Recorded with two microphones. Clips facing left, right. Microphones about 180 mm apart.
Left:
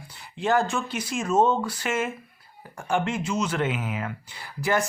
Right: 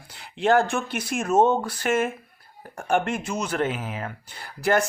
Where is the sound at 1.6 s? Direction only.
55° right (ahead or behind).